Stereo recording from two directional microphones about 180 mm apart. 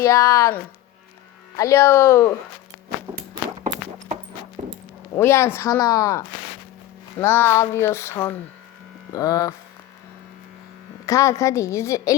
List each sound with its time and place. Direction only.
0.0 s child singing: 15° left (ahead or behind)
4.6 s a sound: 40° right (ahead or behind)
5.1 s child singing: 15° left (ahead or behind)
9.1 s hum: 20° left (ahead or behind)
11.0 s child singing: 15° left (ahead or behind)